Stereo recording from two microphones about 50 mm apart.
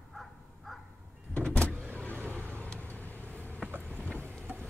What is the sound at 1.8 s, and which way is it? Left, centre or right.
Vehicle, left.